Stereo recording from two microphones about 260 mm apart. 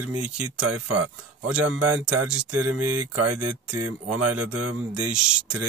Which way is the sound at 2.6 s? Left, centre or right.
Right.